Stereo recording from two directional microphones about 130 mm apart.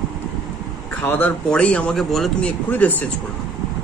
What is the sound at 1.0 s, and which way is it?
Speech, 15° left (ahead or behind).